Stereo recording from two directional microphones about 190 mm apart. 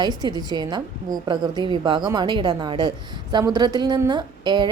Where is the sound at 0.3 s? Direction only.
20° right (ahead or behind).